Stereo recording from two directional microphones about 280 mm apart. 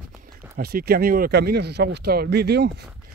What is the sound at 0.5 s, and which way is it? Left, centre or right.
Speech, right.